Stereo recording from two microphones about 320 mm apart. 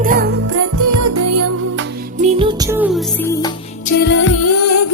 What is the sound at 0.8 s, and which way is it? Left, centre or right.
Music, right.